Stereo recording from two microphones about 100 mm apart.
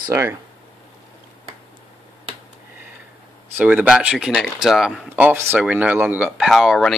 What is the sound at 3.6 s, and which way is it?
Speech, 15° right (ahead or behind).